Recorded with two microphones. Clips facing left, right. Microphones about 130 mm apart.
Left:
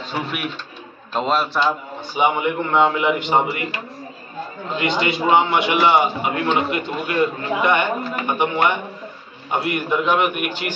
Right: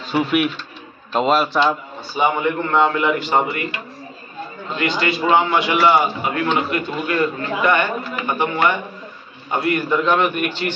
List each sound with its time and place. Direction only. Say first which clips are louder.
0.1 s a man's voice: right 9 dB; centre (ahead or behind)
2.1 s a man's voice: even; 15° left (ahead or behind)
4.7 s a man's voice: even; 20° left (ahead or behind)